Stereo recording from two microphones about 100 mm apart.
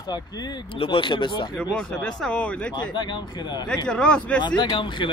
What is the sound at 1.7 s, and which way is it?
Speech, 10° left (ahead or behind).